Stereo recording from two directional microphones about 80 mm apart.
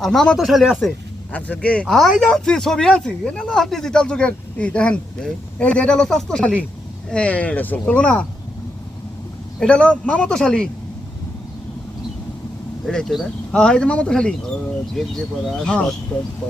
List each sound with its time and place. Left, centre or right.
0.0 s speech: centre
1.3 s speech: centre
9.6 s speech: centre
12.8 s speech: centre
16.1 s speech: left